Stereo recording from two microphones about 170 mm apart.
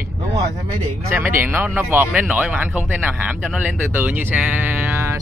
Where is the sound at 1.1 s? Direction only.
15° right (ahead or behind).